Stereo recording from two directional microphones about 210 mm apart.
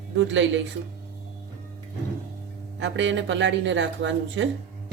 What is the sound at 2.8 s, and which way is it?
Speech, 60° right (ahead or behind).